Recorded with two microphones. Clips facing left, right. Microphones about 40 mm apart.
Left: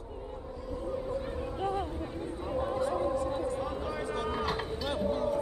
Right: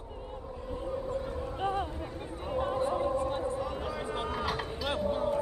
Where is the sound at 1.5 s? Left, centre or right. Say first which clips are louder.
Right 1 dB; right.